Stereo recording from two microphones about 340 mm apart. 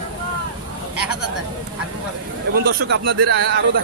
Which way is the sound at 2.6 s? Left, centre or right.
Right.